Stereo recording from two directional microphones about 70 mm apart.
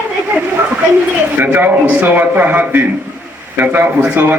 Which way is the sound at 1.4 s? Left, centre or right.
Right.